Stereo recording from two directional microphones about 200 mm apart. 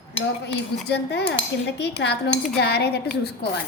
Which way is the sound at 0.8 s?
55° left (ahead or behind).